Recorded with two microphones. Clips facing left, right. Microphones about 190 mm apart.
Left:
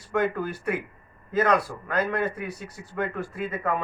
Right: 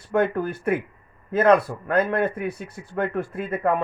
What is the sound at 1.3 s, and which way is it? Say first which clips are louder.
A man's voice: right 5 dB; 55° right (ahead or behind).